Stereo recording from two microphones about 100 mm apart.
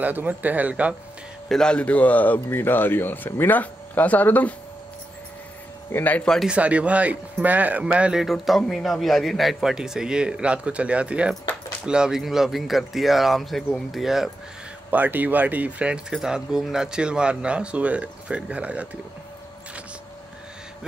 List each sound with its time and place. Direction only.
0.0 s speech: 15° right (ahead or behind)
1.5 s speech: 10° left (ahead or behind)
5.9 s speech: 20° left (ahead or behind)
6.4 s speech: 10° right (ahead or behind)
14.9 s speech: 15° right (ahead or behind)